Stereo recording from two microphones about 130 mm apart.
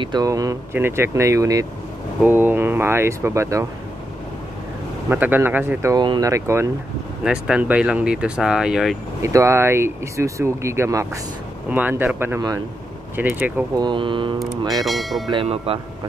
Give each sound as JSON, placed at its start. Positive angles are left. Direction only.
{"t": 0.0, "sound": "speech", "side_deg": -30}
{"t": 5.1, "sound": "speech", "side_deg": -15}
{"t": 5.9, "sound": "speech", "side_deg": -35}
{"t": 7.2, "sound": "speech", "side_deg": -5}
{"t": 9.2, "sound": "speech", "side_deg": -25}
{"t": 13.7, "sound": "speech", "side_deg": -35}
{"t": 14.6, "sound": "speech", "side_deg": -30}
{"t": 14.9, "sound": "speech", "side_deg": 0}
{"t": 15.4, "sound": "speech", "side_deg": -50}